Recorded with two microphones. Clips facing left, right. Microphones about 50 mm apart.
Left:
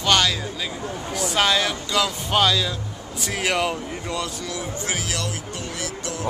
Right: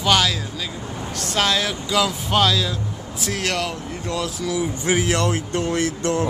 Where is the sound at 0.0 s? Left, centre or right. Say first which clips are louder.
Right 1 dB; centre.